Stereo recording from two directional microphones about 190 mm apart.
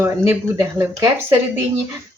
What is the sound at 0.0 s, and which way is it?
Speech, 10° right (ahead or behind).